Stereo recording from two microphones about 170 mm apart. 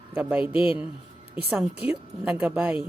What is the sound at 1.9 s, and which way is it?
Speech, 5° right (ahead or behind).